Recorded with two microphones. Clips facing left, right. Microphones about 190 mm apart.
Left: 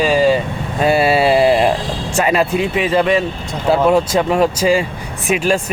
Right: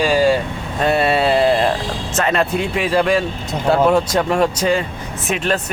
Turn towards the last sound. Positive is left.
turn(degrees=5)  # may be behind; listen again after turning